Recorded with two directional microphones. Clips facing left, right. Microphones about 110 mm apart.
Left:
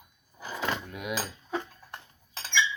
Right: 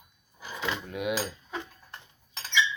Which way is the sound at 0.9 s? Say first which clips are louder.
Right 4 dB; 20° right (ahead or behind).